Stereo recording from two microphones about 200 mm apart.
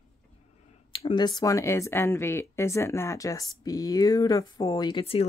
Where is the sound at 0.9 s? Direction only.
25° left (ahead or behind).